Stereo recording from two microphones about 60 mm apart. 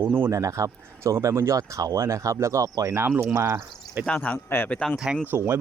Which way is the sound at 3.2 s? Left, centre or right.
Right.